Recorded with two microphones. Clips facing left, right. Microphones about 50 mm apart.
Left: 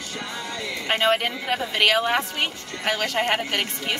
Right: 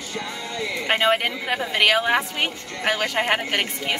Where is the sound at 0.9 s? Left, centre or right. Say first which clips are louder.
Right 1 dB; centre.